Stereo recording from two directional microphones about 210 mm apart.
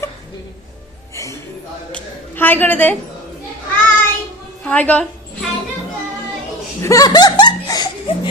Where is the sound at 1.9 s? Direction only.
10° left (ahead or behind).